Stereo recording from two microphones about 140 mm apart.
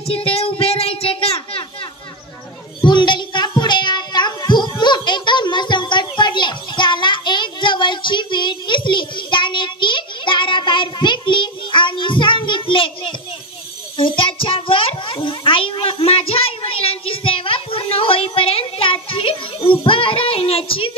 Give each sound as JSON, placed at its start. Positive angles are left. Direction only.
{"t": 0.0, "sound": "child singing", "side_deg": 40}
{"t": 2.9, "sound": "music", "side_deg": 35}
{"t": 13.9, "sound": "a sound", "side_deg": 40}